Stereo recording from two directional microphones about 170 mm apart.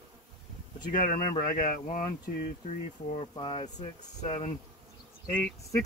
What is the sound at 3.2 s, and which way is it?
Speech, 30° left (ahead or behind).